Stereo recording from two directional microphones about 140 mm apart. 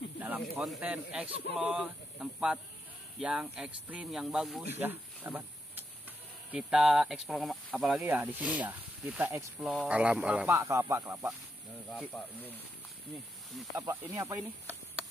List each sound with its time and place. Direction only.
0.6 s speech: 5° right (ahead or behind)
4.7 s speech: 15° right (ahead or behind)
8.1 s speech: 10° right (ahead or behind)
9.6 s speech: centre (ahead or behind)
10.5 s speech: 20° right (ahead or behind)
13.7 s speech: 25° right (ahead or behind)